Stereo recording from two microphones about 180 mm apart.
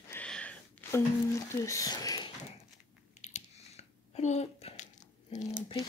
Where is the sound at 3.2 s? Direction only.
40° left (ahead or behind).